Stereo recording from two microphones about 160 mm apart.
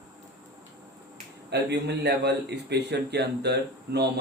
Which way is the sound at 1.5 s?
90° right.